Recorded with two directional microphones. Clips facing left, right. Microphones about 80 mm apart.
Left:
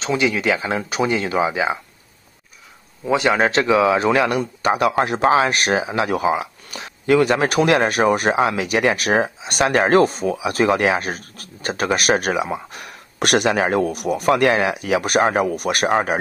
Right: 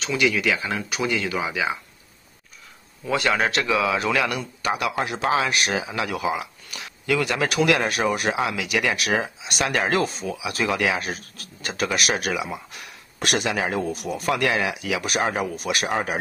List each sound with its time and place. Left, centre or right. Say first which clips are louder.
0.0 s speech: left 3 dB; left
3.1 s speech: left 5 dB; left
14.3 s speech: left 6 dB; left